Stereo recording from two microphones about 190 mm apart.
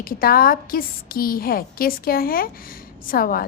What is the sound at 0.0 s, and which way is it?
Speech, 50° left (ahead or behind).